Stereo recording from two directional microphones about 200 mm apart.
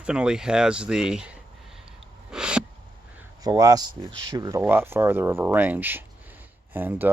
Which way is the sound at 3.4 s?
20° right (ahead or behind).